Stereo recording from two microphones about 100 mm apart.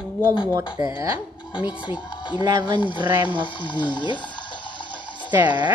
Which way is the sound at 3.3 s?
50° left (ahead or behind).